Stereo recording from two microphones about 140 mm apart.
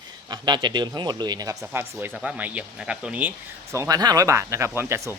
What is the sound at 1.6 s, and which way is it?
A man's voice, 15° right (ahead or behind).